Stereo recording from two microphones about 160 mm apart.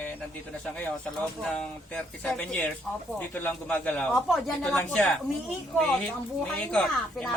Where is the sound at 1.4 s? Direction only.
5° left (ahead or behind).